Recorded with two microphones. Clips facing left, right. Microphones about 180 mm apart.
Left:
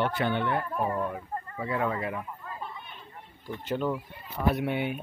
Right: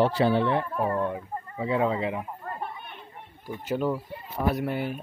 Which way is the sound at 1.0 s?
20° right (ahead or behind).